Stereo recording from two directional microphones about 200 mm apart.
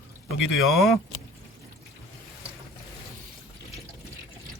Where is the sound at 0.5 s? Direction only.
Centre (ahead or behind).